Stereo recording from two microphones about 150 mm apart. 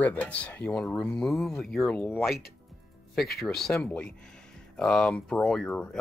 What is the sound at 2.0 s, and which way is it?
Speech, 15° left (ahead or behind).